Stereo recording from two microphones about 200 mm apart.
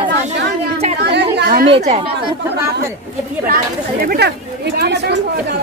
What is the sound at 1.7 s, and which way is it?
Speech, 30° right (ahead or behind).